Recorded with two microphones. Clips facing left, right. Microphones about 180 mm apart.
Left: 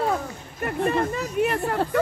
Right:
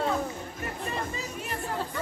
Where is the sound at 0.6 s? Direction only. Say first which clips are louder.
Left 12 dB; 60° left (ahead or behind).